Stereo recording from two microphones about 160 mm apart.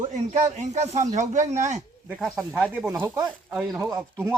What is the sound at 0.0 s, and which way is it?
Speech, 50° right (ahead or behind).